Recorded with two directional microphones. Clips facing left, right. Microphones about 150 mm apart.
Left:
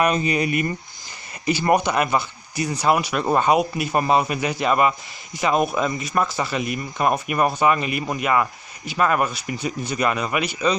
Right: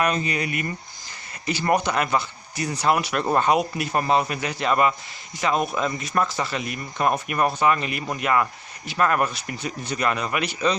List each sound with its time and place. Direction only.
0.0 s speech: 15° left (ahead or behind)